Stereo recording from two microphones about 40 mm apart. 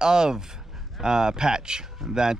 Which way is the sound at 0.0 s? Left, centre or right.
Centre.